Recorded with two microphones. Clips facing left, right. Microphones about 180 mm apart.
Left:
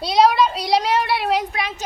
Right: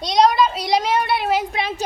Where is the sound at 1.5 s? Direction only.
30° right (ahead or behind).